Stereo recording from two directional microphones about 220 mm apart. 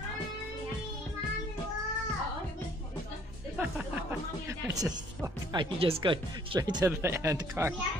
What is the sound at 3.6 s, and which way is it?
Music, 5° right (ahead or behind).